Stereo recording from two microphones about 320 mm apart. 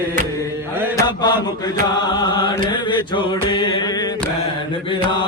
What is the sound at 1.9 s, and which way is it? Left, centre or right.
Chant, centre.